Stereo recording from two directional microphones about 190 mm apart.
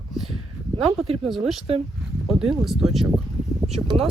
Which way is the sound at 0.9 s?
30° right (ahead or behind).